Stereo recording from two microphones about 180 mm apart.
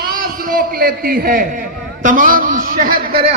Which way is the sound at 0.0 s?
50° right (ahead or behind).